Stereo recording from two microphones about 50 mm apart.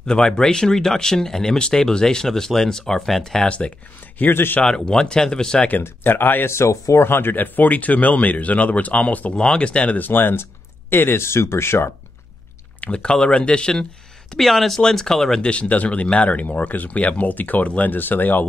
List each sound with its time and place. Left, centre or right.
0.0 s speech: centre
3.4 s speech: left
4.2 s speech: left
4.6 s speech: centre
5.7 s speech: left
6.5 s speech: left
7.0 s speech: left
9.3 s speech: left
9.9 s speech: left
12.8 s speech: centre
14.3 s speech: centre
15.5 s speech: left